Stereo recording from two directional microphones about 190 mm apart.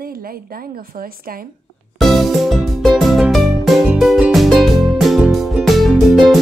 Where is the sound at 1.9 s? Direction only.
Centre (ahead or behind).